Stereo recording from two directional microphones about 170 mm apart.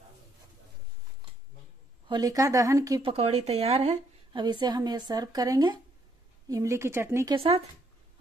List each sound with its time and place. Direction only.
2.0 s a woman's voice: 25° right (ahead or behind)
3.0 s speech: 35° right (ahead or behind)
3.9 s a woman's voice: 25° right (ahead or behind)
7.3 s speech: 35° right (ahead or behind)